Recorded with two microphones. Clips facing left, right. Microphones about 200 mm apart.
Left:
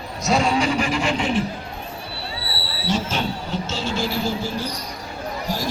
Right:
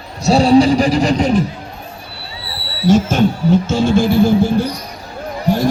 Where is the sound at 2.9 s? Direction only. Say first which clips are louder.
Right 11 dB; 45° right (ahead or behind).